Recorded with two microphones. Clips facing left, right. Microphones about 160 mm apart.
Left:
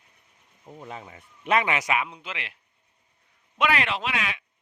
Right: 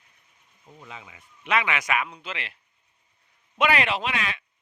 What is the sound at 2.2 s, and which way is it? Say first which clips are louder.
Speech: right 1 dB; 10° left (ahead or behind).